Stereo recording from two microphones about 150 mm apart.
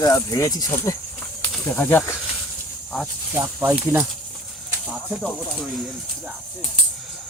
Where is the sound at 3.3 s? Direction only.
20° right (ahead or behind).